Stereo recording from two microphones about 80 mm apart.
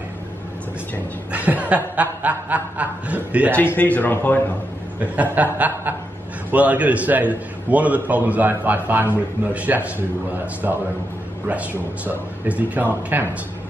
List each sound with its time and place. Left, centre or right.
1.3 s a man's voice: centre
3.5 s speech: left
5.0 s a man's voice: centre
12.0 s a man's voice: centre